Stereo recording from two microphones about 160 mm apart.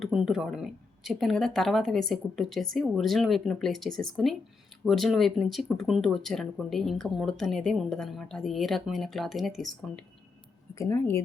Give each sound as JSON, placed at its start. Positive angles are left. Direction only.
{"t": 0.0, "sound": "speech", "side_deg": -5}
{"t": 10.8, "sound": "speech", "side_deg": 15}